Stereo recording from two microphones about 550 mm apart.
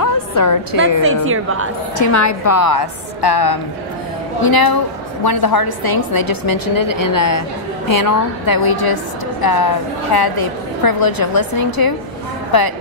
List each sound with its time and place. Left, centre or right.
0.0 s music: left
1.0 s a woman's voice: right
2.0 s a woman's voice: left